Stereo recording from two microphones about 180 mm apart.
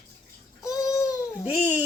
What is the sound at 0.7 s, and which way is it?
Baby cry, 20° left (ahead or behind).